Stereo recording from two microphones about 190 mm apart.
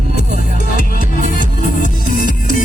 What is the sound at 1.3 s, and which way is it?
Music, 45° left (ahead or behind).